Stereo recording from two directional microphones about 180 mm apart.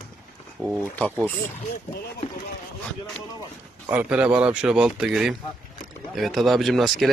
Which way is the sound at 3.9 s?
5° right (ahead or behind).